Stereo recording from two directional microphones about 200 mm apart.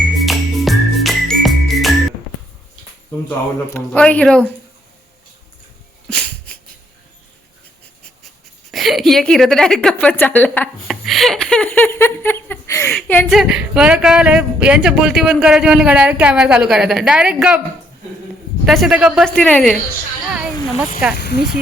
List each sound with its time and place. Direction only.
0.2 s music: centre (ahead or behind)
3.2 s speech: 10° left (ahead or behind)
6.1 s dog: 5° left (ahead or behind)
8.7 s a woman's voice: centre (ahead or behind)
18.6 s speech: centre (ahead or behind)
21.2 s speech: 55° left (ahead or behind)